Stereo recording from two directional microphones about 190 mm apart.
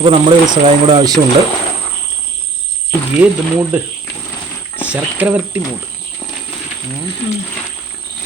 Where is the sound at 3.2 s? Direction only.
10° right (ahead or behind).